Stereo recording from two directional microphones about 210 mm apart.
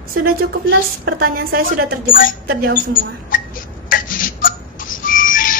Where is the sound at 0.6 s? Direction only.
50° right (ahead or behind).